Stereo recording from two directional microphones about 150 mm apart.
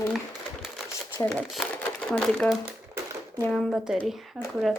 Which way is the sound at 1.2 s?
Centre (ahead or behind).